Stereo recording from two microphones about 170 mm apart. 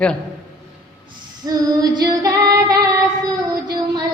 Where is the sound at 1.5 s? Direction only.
25° right (ahead or behind).